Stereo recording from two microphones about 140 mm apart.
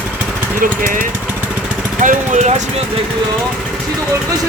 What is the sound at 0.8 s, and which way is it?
Speech, 70° right (ahead or behind).